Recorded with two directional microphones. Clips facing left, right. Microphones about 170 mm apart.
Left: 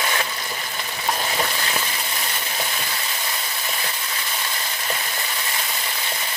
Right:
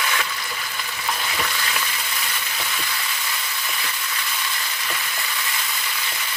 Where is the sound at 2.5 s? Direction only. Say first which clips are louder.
Left 2 dB; 35° left (ahead or behind).